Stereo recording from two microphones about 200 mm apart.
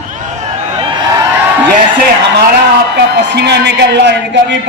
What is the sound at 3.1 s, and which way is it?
A man's voice, 55° right (ahead or behind).